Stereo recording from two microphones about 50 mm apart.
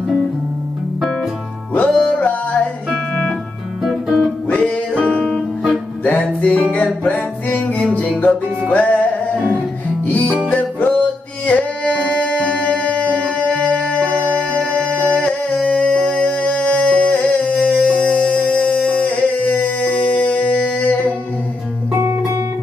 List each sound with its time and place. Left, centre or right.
1.9 s music: centre
2.1 s music: left
3.8 s guitar: centre
4.5 s music: left